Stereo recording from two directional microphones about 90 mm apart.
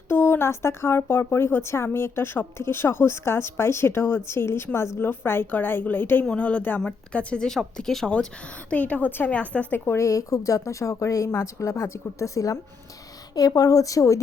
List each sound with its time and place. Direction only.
0.1 s a woman's voice: 25° left (ahead or behind)